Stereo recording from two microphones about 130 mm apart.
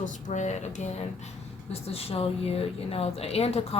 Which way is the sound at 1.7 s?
50° left (ahead or behind).